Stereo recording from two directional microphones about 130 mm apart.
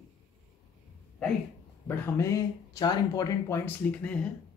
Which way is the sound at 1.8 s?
20° left (ahead or behind).